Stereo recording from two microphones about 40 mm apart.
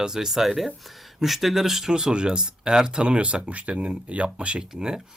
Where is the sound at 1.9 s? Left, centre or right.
Right.